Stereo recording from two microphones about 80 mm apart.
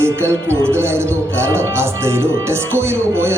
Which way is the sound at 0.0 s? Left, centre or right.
Right.